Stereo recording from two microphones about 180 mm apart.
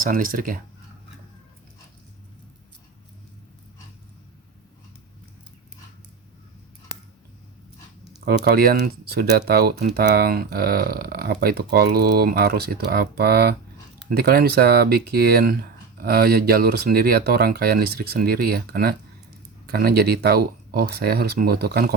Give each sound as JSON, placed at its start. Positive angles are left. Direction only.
{"t": 0.0, "sound": "speech", "side_deg": -50}
{"t": 8.2, "sound": "speech", "side_deg": -60}